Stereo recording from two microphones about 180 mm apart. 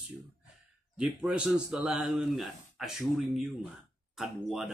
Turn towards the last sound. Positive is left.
turn(degrees=0)  # may be behind; listen again after turning